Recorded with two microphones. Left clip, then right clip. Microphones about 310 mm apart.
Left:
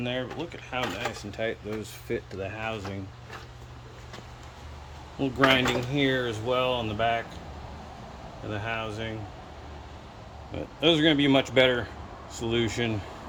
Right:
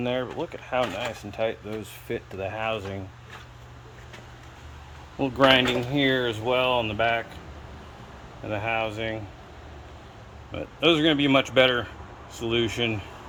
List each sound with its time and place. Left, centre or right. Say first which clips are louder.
0.0 s speech: right 4 dB; centre
5.5 s speech: right 4 dB; centre
8.4 s speech: right 5 dB; centre
10.5 s speech: right 2 dB; centre